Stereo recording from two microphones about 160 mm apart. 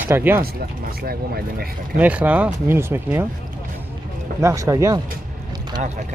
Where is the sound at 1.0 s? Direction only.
70° right (ahead or behind).